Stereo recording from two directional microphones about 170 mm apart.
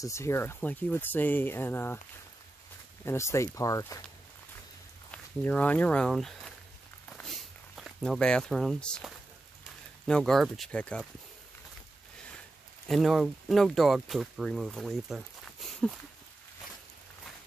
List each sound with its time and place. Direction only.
0.0 s speech: 15° left (ahead or behind)
3.1 s speech: 15° left (ahead or behind)
5.1 s speech: 10° left (ahead or behind)
7.1 s a sound: centre (ahead or behind)
10.0 s speech: 5° left (ahead or behind)
12.8 s speech: centre (ahead or behind)
15.7 s a sound: centre (ahead or behind)